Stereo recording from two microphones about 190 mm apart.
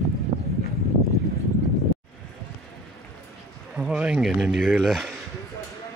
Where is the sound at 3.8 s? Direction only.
5° right (ahead or behind).